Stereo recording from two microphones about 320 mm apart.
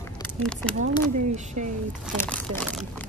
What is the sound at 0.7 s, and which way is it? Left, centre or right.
Speech, right.